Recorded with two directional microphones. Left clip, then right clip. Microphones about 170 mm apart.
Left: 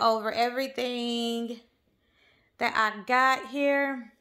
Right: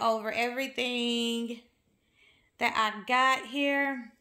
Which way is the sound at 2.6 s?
15° left (ahead or behind).